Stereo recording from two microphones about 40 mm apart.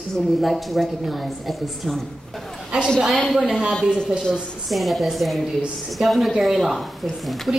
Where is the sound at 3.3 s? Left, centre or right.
Centre.